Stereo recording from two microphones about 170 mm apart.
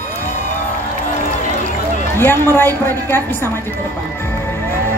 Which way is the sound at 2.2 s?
10° left (ahead or behind).